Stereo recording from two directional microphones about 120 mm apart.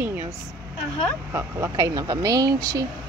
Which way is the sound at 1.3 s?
25° right (ahead or behind).